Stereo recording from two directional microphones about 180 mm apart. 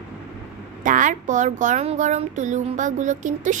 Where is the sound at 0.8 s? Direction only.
45° right (ahead or behind).